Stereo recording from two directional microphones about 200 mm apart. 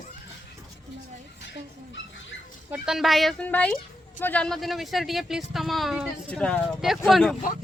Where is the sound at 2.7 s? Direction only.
5° right (ahead or behind).